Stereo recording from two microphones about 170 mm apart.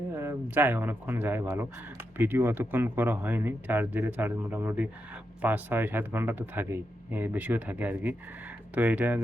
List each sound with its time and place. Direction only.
0.1 s speech: 15° right (ahead or behind)